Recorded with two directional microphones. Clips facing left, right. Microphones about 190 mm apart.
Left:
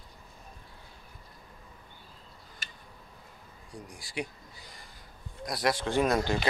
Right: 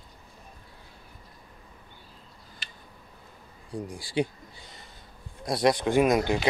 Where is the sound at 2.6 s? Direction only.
45° left (ahead or behind).